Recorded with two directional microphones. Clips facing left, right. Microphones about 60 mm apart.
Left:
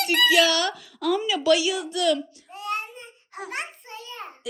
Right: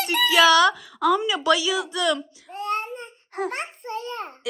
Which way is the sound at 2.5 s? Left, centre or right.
Right.